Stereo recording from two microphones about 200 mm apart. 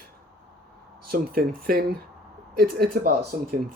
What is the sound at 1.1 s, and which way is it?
Speech, 45° right (ahead or behind).